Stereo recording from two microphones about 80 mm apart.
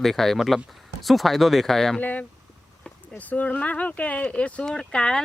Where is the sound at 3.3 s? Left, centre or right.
Centre.